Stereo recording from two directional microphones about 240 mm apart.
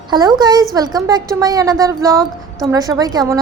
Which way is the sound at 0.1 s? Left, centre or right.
Centre.